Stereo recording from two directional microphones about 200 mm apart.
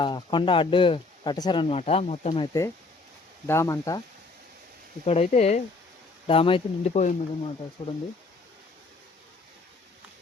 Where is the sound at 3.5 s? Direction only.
15° left (ahead or behind).